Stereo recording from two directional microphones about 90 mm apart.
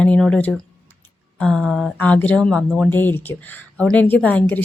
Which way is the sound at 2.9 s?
20° left (ahead or behind).